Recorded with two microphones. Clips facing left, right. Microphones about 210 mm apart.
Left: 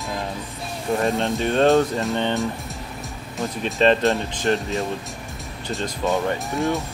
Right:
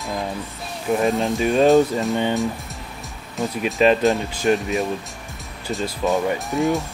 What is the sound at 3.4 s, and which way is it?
Speech, centre (ahead or behind).